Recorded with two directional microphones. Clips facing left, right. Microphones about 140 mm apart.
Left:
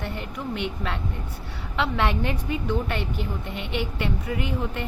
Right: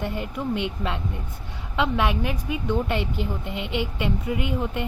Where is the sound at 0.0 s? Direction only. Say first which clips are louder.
Right 4 dB; 20° right (ahead or behind).